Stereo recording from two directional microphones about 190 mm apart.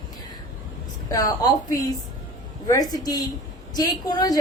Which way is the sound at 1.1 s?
20° left (ahead or behind).